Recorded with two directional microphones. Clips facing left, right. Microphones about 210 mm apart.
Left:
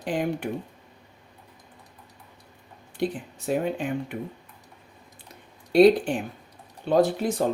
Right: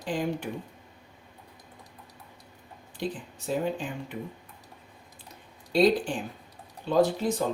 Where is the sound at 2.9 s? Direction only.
60° left (ahead or behind).